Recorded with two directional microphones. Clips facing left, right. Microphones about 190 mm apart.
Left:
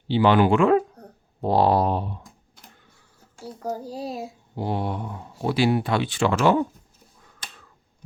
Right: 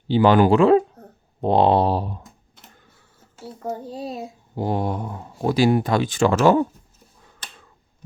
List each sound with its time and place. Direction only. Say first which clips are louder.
0.1 s speech: right 3 dB; 45° right (ahead or behind)
3.2 s a child's voice: even; centre (ahead or behind)
4.5 s speech: right 3 dB; 45° right (ahead or behind)